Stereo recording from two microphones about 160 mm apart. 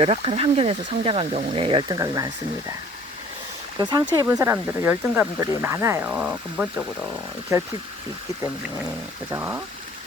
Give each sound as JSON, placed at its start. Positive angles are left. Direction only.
{"t": 0.0, "sound": "speech", "side_deg": -35}
{"t": 3.8, "sound": "speech", "side_deg": -25}
{"t": 7.5, "sound": "speech", "side_deg": -20}
{"t": 9.3, "sound": "speech", "side_deg": -15}